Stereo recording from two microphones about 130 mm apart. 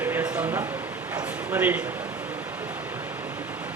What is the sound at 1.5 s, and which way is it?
Speech, 15° right (ahead or behind).